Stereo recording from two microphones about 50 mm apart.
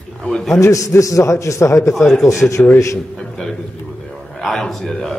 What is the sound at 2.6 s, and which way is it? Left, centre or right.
Speech, left.